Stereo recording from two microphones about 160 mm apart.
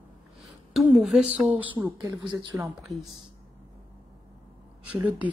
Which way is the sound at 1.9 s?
25° right (ahead or behind).